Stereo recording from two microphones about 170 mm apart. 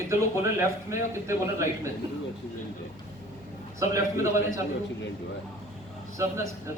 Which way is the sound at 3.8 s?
20° right (ahead or behind).